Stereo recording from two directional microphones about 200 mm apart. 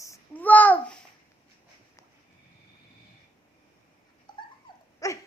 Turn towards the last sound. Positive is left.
turn(degrees=15)  # may be behind; listen again after turning